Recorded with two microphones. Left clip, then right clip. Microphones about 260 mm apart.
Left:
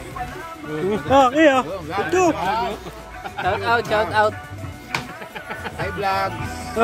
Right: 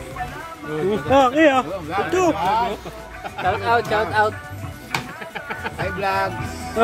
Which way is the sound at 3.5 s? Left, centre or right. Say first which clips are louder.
Even; left.